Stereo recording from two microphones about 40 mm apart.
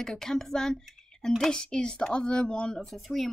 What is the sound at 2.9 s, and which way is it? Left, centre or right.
Speech, centre.